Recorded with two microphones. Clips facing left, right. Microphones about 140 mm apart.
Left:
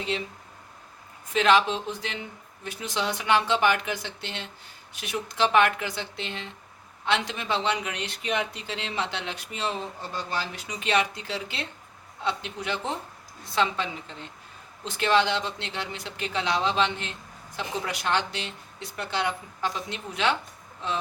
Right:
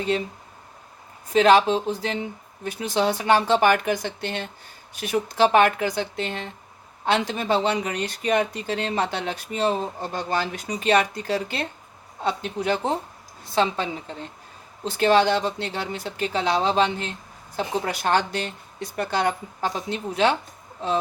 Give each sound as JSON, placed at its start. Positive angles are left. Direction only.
{"t": 0.1, "sound": "speech", "side_deg": -45}
{"t": 1.3, "sound": "speech", "side_deg": -40}